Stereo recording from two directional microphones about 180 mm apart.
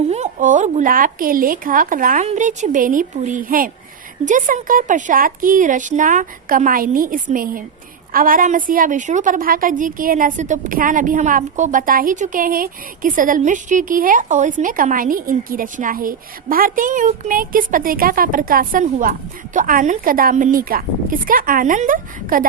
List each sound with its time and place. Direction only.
0.1 s a woman's voice: 40° right (ahead or behind)